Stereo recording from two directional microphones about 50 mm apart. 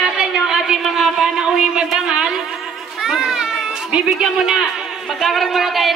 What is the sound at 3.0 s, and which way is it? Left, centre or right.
Children playing, centre.